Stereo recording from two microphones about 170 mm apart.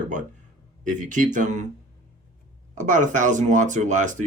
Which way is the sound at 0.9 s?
50° right (ahead or behind).